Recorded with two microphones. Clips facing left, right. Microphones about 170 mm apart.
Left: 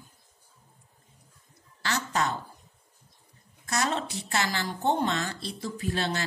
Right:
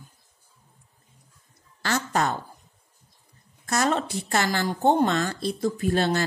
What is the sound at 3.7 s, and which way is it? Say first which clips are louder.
A woman's voice: right 5 dB; 50° right (ahead or behind).